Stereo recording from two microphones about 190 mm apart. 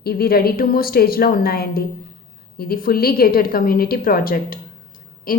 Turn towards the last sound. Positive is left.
turn(degrees=50)  # may be behind; listen again after turning